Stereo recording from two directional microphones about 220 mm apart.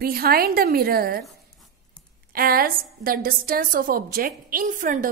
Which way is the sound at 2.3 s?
40° right (ahead or behind).